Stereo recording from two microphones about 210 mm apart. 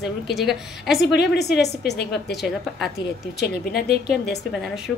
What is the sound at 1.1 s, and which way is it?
A woman's voice, 50° left (ahead or behind).